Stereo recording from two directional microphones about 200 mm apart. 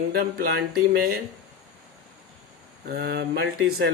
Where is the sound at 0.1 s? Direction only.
50° right (ahead or behind).